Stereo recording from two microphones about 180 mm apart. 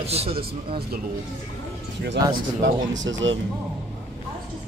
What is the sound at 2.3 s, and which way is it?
Speech, 85° right.